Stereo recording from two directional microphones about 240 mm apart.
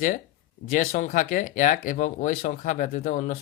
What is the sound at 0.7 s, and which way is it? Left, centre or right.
Speech, left.